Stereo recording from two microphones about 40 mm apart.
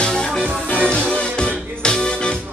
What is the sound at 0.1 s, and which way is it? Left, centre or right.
Music, centre.